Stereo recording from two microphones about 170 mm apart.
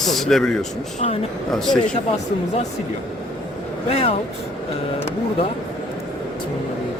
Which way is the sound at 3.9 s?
35° left (ahead or behind).